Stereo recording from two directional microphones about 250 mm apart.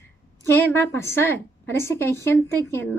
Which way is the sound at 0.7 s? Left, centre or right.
Centre.